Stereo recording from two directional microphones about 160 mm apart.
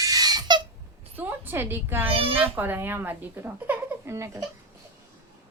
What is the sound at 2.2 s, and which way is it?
Speech, 35° right (ahead or behind).